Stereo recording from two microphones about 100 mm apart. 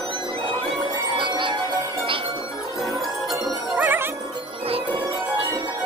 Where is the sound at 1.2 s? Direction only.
55° right (ahead or behind).